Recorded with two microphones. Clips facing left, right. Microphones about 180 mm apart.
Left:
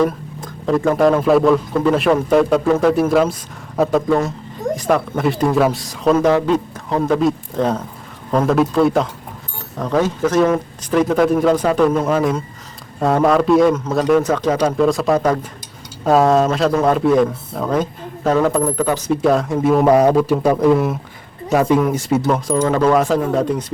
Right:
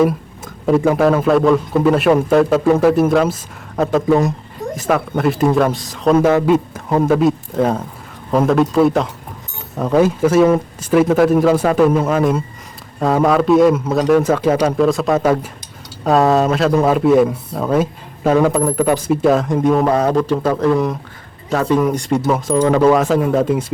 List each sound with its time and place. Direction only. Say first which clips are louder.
0.0 s speech: right 2 dB; 5° right (ahead or behind)
4.7 s speech: even; centre (ahead or behind)
22.5 s speech: right 3 dB; 10° right (ahead or behind)